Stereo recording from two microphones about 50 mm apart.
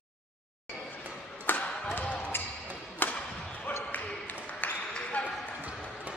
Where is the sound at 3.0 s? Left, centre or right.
Left.